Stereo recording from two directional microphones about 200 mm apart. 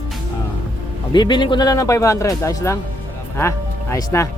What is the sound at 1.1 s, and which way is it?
Speech, 20° left (ahead or behind).